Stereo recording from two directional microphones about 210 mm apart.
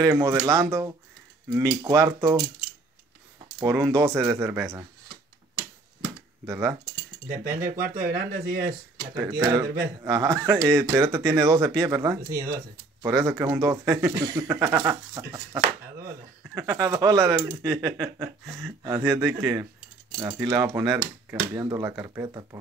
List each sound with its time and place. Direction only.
0.0 s speech: 15° right (ahead or behind)
3.6 s speech: 15° right (ahead or behind)
6.4 s speech: 10° right (ahead or behind)
7.2 s cutlery: 40° right (ahead or behind)
8.1 s speech: 45° right (ahead or behind)
9.1 s speech: 15° right (ahead or behind)